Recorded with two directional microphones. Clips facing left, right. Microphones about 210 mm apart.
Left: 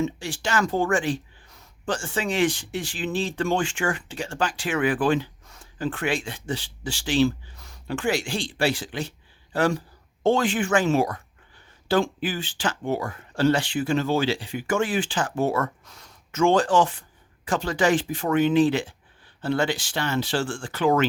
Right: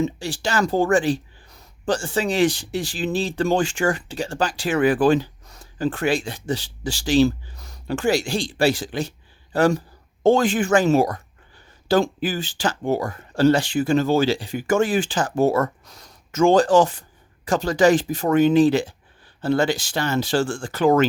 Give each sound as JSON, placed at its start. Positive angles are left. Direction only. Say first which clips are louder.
{"t": 0.0, "sound": "speech", "louder": "right 3 dB", "side_deg": -35}